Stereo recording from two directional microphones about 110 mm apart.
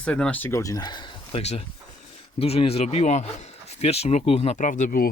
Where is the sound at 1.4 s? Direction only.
80° left.